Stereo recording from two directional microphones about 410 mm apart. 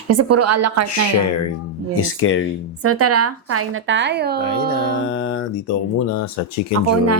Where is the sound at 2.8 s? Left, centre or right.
Right.